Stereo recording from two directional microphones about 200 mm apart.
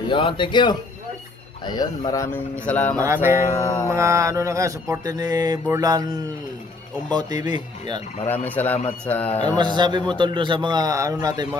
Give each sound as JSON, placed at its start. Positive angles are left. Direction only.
{"t": 0.1, "sound": "speech", "side_deg": 25}
{"t": 3.0, "sound": "mantra", "side_deg": -15}
{"t": 3.3, "sound": "speech", "side_deg": 15}
{"t": 3.8, "sound": "mantra", "side_deg": -15}
{"t": 7.1, "sound": "a man's voice", "side_deg": -20}
{"t": 8.3, "sound": "speech", "side_deg": 10}
{"t": 9.5, "sound": "a man's voice", "side_deg": -20}